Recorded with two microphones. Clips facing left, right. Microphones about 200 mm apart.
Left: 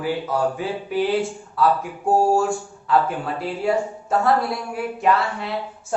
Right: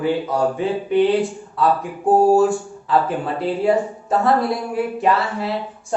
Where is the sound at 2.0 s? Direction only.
20° right (ahead or behind).